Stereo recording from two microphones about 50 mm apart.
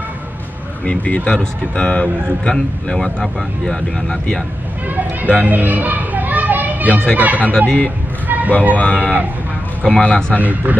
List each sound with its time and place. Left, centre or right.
0.8 s speech: left
4.8 s speech: right
5.4 s children playing: right
7.2 s speech: right
7.6 s speech: left
8.3 s a sound: right
8.7 s speech: left
10.3 s speech: right